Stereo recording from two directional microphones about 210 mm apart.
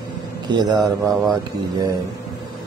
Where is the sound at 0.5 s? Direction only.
20° right (ahead or behind).